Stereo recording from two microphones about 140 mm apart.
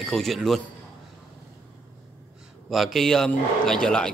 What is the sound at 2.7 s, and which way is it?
A man's voice, centre (ahead or behind).